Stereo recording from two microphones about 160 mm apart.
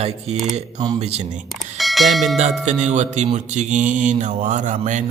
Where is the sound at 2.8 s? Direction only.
45° right (ahead or behind).